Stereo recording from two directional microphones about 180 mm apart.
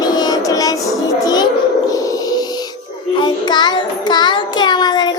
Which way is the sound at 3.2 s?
25° left (ahead or behind).